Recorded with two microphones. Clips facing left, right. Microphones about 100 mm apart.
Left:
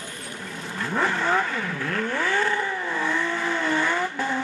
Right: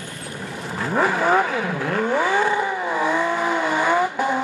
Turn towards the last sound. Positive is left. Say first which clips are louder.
# right 6 dB
turn(degrees=-15)  # may be behind; listen again after turning